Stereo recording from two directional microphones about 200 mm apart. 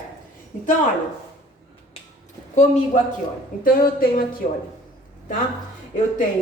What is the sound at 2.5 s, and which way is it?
A woman's voice, 35° left (ahead or behind).